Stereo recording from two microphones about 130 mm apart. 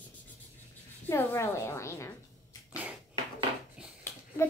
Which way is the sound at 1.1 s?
20° left (ahead or behind).